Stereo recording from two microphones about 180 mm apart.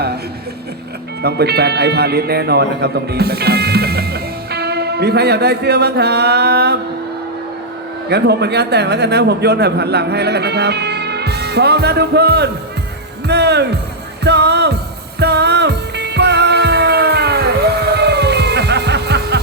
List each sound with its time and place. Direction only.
1.2 s speech: 65° right (ahead or behind)
8.1 s a man's voice: 65° right (ahead or behind)
14.3 s music: 65° right (ahead or behind)